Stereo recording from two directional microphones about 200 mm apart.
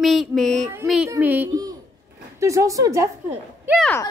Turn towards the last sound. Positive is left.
turn(degrees=10)  # may be behind; listen again after turning